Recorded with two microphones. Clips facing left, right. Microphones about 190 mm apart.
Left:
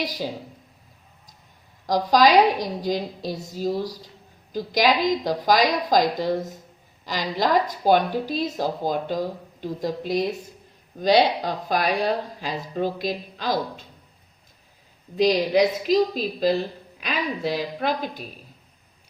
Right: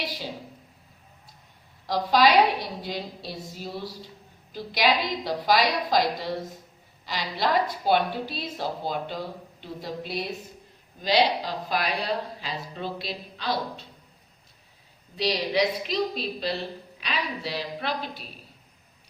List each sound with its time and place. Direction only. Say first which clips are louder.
0.0 s speech: left 6 dB; 40° left (ahead or behind)
1.9 s speech: left 3 dB; 45° left (ahead or behind)
15.1 s speech: left 7 dB; 45° left (ahead or behind)